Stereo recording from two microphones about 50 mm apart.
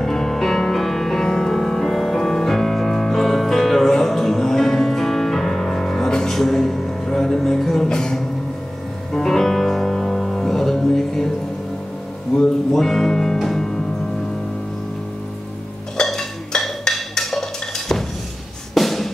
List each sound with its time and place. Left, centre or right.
0.0 s music: centre
12.4 s music: centre
16.0 s music: centre